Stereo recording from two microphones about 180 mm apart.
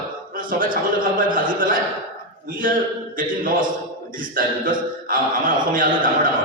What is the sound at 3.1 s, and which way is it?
Speech, 50° right (ahead or behind).